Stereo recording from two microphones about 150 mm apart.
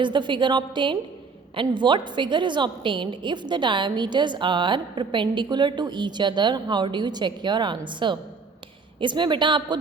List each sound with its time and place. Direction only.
0.0 s a woman's voice: 30° right (ahead or behind)